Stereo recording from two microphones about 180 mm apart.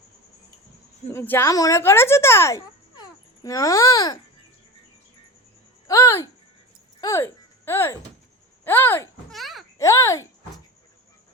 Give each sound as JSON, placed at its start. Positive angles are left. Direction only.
{"t": 1.1, "sound": "speech", "side_deg": 10}
{"t": 5.9, "sound": "music", "side_deg": 15}
{"t": 7.0, "sound": "speech", "side_deg": 15}
{"t": 9.3, "sound": "a sound", "side_deg": 0}
{"t": 9.7, "sound": "speech", "side_deg": 15}